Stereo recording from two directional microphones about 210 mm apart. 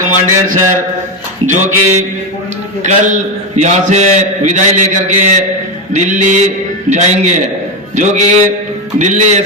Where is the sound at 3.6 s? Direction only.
35° right (ahead or behind).